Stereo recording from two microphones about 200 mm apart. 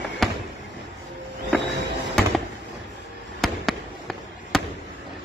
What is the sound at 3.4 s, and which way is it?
Basketball bounce, centre (ahead or behind).